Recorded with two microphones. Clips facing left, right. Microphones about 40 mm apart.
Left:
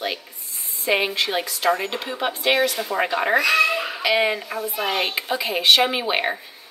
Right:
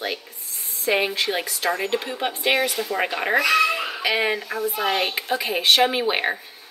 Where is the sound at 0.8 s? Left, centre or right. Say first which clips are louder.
Even; centre.